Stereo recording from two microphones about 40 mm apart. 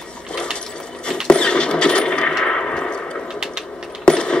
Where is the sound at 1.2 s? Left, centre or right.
Left.